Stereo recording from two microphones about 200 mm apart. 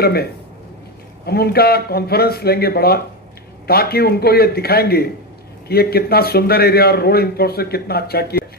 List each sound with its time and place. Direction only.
0.0 s a man's voice: 50° left (ahead or behind)